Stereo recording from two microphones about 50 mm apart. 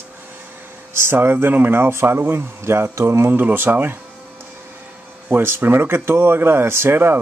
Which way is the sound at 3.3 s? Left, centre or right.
Right.